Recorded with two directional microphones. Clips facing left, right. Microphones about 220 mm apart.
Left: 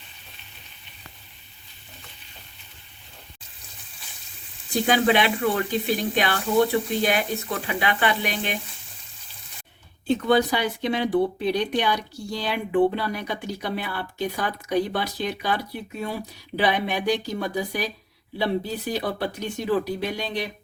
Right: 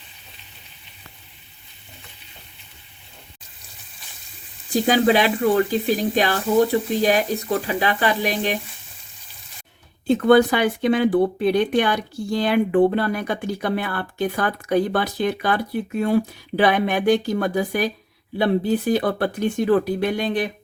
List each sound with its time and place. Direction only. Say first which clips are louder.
4.7 s speech: right 3 dB; 40° right (ahead or behind)
10.1 s speech: right 6 dB; 50° right (ahead or behind)